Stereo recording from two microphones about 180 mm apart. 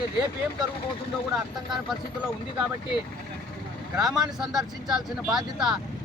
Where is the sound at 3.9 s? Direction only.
5° right (ahead or behind).